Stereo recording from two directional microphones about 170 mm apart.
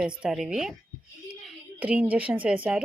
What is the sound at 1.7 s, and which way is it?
Speech, 10° right (ahead or behind).